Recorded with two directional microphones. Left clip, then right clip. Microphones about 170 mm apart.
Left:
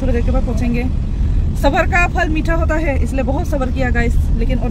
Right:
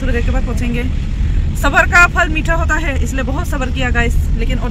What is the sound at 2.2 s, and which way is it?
Speech, 60° right (ahead or behind).